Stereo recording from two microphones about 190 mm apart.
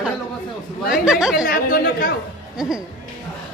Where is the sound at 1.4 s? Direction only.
50° left (ahead or behind).